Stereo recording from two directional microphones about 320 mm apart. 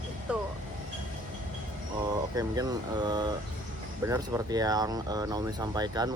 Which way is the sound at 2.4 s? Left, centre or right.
Centre.